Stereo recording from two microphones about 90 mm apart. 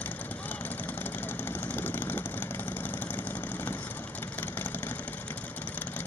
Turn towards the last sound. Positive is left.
turn(degrees=20)  # may be behind; listen again after turning